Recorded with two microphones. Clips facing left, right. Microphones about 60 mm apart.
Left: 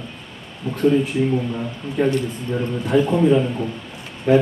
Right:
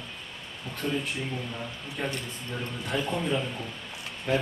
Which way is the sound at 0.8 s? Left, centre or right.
Centre.